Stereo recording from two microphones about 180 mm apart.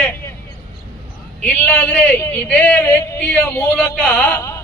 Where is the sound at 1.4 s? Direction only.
10° left (ahead or behind).